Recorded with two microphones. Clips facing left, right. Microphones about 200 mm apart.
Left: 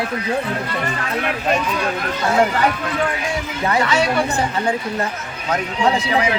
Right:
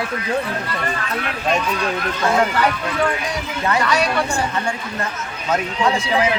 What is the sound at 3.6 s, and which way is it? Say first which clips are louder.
Speech: left 1 dB; 25° left (ahead or behind).